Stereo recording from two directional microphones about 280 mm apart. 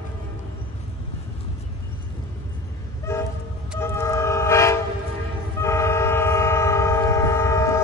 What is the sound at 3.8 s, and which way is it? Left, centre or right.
Train, centre.